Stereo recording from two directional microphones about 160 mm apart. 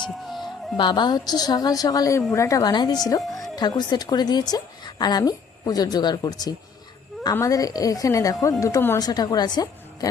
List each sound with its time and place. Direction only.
0.0 s music: centre (ahead or behind)
0.8 s a woman's voice: 25° left (ahead or behind)